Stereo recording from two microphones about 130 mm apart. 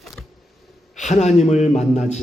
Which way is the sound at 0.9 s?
65° left (ahead or behind).